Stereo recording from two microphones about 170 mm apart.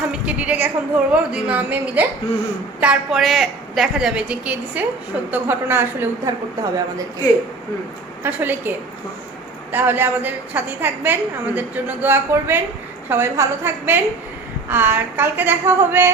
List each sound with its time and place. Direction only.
0.1 s a woman's voice: 5° right (ahead or behind)
8.2 s a woman's voice: 10° right (ahead or behind)
9.7 s a woman's voice: 10° right (ahead or behind)